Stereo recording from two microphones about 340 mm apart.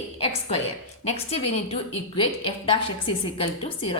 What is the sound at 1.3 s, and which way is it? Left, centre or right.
A woman's voice, centre.